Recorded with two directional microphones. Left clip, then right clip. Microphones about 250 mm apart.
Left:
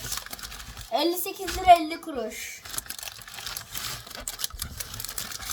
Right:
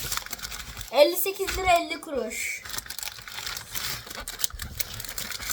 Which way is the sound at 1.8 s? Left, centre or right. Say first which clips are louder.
Right 1 dB; centre.